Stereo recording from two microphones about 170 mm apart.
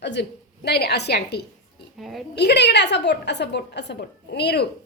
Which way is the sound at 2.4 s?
80° left.